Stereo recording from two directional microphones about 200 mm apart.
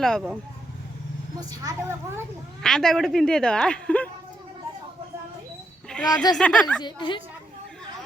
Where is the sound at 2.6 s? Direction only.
Centre (ahead or behind).